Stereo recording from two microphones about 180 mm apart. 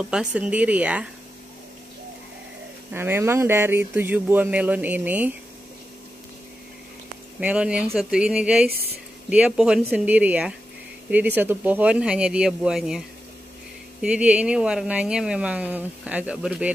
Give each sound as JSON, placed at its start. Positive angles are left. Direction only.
{"t": 0.0, "sound": "speech", "side_deg": -5}
{"t": 2.9, "sound": "speech", "side_deg": -15}
{"t": 7.3, "sound": "speech", "side_deg": -5}
{"t": 8.6, "sound": "a woman's voice", "side_deg": -60}
{"t": 9.3, "sound": "speech", "side_deg": -5}
{"t": 14.0, "sound": "speech", "side_deg": -5}